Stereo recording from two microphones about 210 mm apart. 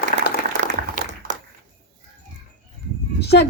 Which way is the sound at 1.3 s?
35° right (ahead or behind).